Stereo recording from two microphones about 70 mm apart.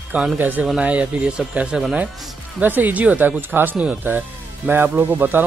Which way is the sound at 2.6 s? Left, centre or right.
Right.